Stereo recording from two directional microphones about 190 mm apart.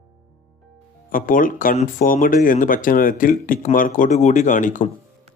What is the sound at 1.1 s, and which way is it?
Speech, 45° left (ahead or behind).